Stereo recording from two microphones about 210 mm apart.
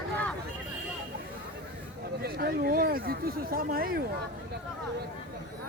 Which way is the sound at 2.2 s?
45° right (ahead or behind).